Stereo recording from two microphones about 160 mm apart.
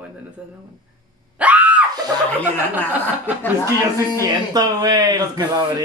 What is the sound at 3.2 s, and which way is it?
Speech, 10° left (ahead or behind).